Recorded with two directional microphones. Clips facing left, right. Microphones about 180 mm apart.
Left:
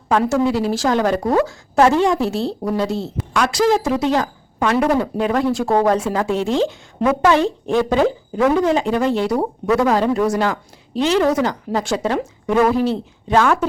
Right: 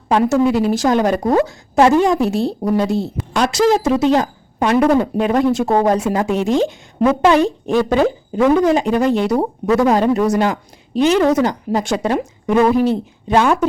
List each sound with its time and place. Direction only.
0.1 s a woman's voice: 20° right (ahead or behind)